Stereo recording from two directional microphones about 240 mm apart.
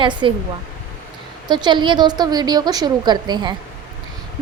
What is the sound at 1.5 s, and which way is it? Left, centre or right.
A woman's voice, centre.